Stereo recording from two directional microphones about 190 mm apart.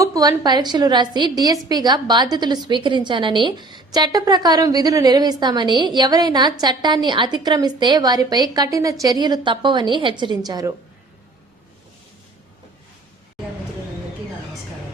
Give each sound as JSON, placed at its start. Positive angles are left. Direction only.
{"t": 0.0, "sound": "a woman's voice", "side_deg": -20}